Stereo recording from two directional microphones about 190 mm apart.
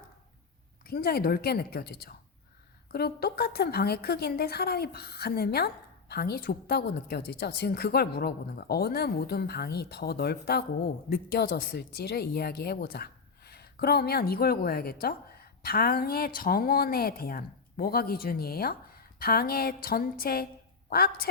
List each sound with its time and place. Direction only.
0.9 s a woman's voice: 55° left (ahead or behind)